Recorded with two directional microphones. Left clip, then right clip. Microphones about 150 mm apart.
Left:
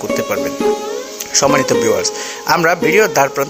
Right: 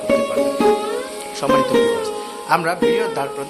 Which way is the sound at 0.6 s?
Centre (ahead or behind).